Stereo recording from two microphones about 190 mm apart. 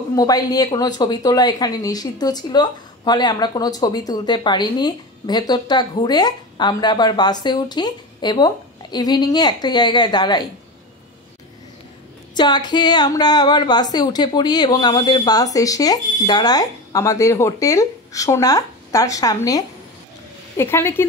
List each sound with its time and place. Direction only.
0.1 s speech: 20° left (ahead or behind)
12.4 s speech: 25° left (ahead or behind)